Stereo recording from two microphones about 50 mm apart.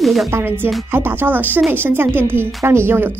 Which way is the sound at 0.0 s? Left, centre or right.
Centre.